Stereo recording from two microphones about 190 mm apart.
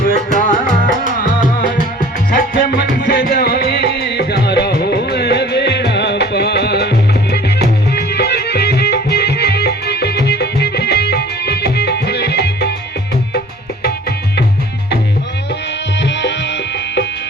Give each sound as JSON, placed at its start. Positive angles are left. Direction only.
{"t": 0.0, "sound": "music", "side_deg": 45}
{"t": 2.0, "sound": "music", "side_deg": 50}
{"t": 16.0, "sound": "music", "side_deg": 65}